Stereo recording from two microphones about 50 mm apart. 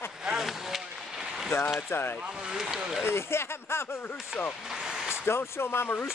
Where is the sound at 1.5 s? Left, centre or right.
Left.